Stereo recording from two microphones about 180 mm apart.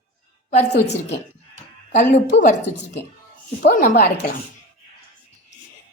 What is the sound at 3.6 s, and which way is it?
Speech, 55° left (ahead or behind).